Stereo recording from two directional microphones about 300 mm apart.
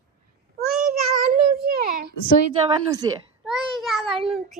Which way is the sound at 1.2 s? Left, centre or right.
Right.